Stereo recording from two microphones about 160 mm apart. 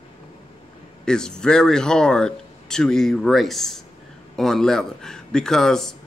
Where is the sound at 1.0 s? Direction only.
5° left (ahead or behind).